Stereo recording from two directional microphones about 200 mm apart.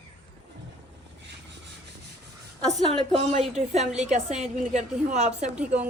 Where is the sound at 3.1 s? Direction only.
35° right (ahead or behind).